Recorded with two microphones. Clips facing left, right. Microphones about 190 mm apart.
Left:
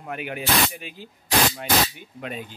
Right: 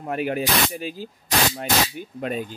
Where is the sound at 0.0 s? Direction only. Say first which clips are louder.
Right 6 dB; 35° right (ahead or behind).